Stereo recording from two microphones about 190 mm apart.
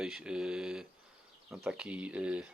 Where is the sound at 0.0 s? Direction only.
5° right (ahead or behind).